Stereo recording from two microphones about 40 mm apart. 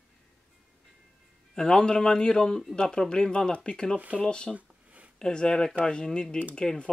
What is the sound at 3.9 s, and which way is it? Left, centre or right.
Speech, right.